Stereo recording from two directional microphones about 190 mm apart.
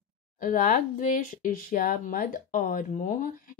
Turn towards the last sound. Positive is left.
turn(degrees=45)  # may be behind; listen again after turning